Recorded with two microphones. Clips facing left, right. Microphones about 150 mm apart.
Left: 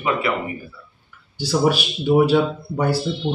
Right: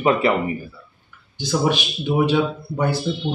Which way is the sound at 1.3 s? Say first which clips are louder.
Left 2 dB; 10° left (ahead or behind).